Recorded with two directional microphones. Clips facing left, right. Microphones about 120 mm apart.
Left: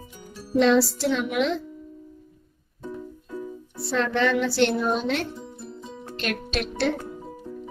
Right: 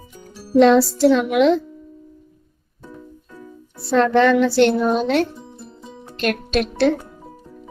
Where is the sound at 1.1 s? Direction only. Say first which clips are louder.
Right 9 dB; 65° right (ahead or behind).